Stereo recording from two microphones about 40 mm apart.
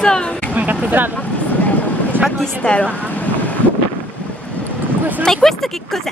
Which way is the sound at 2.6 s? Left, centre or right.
Left.